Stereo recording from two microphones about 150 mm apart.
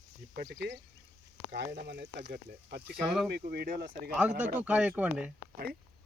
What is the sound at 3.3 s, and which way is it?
Speech, 90° right.